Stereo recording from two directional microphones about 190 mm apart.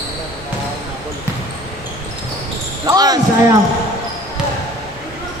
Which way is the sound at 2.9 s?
20° right (ahead or behind).